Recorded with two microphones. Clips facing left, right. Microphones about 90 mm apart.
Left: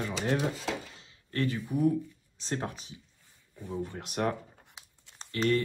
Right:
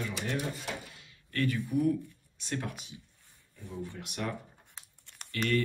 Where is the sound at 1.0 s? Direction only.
25° left (ahead or behind).